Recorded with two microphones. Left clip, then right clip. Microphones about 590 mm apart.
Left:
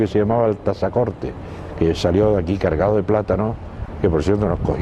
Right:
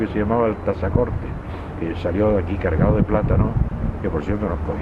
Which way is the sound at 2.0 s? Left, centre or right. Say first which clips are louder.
Even; left.